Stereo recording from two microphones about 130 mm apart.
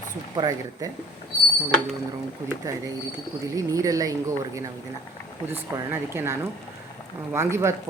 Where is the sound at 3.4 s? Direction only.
25° right (ahead or behind).